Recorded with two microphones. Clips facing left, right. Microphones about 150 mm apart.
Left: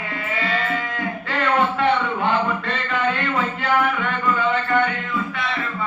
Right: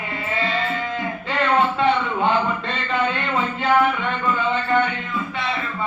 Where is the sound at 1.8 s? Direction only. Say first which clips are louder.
Even; 20° right (ahead or behind).